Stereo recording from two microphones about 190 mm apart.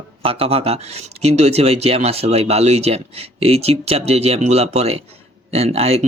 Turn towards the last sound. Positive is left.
turn(degrees=-35)  # may be behind; listen again after turning